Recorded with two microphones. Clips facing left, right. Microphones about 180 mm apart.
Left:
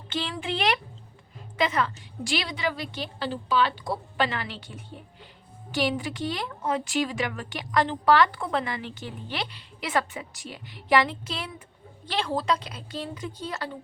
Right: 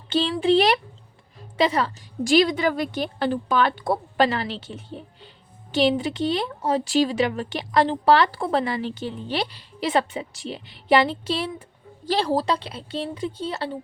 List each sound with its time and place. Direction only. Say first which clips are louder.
0.1 s a woman's voice: right 11 dB; 30° right (ahead or behind)